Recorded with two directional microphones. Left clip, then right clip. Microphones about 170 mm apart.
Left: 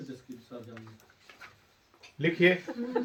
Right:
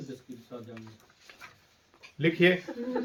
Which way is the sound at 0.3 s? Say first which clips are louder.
Even; 25° left (ahead or behind).